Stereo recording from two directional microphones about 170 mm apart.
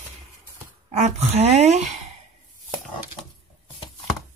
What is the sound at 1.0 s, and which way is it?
Speech, 40° right (ahead or behind).